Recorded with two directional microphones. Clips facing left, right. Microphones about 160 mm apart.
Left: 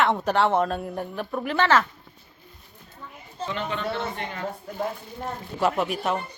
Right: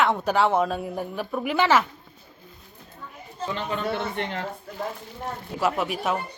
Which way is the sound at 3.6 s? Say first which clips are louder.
Even; 35° right (ahead or behind).